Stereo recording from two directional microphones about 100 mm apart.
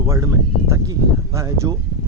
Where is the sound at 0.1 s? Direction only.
30° right (ahead or behind).